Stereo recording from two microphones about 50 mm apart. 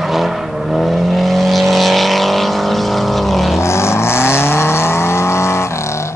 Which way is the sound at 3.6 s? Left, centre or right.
Left.